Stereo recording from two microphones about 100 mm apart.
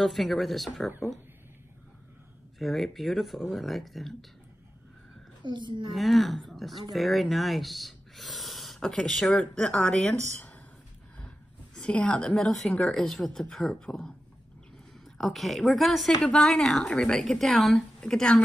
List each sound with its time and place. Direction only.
0.0 s speech: centre (ahead or behind)
2.6 s speech: centre (ahead or behind)
5.4 s a woman's voice: 50° right (ahead or behind)
5.9 s speech: centre (ahead or behind)
11.1 s a woman's voice: 10° left (ahead or behind)
15.1 s speech: centre (ahead or behind)